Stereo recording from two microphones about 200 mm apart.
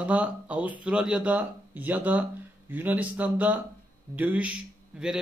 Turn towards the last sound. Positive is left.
turn(degrees=-5)  # may be behind; listen again after turning